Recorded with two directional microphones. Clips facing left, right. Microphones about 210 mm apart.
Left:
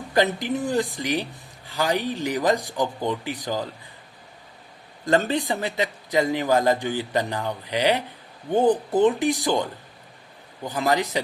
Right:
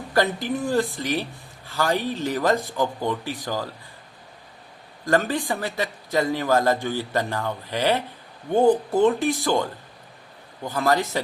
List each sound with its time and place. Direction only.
0.1 s speech: 20° left (ahead or behind)
5.0 s speech: 20° left (ahead or behind)
10.7 s speech: 15° left (ahead or behind)